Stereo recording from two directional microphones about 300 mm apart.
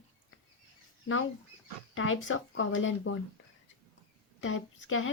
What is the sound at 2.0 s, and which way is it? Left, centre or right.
Speech, left.